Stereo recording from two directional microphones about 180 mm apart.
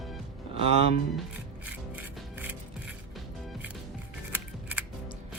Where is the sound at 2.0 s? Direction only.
10° right (ahead or behind).